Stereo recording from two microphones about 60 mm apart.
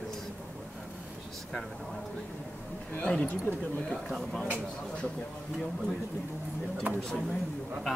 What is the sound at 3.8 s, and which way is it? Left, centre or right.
Speech, centre.